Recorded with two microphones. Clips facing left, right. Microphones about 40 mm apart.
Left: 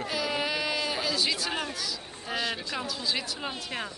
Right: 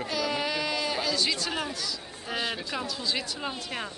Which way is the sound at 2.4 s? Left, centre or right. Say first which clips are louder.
Even; centre.